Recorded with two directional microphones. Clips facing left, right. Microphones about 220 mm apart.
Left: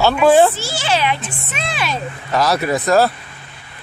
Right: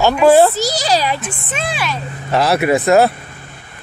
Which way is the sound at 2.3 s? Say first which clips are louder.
Right 3 dB; 25° right (ahead or behind).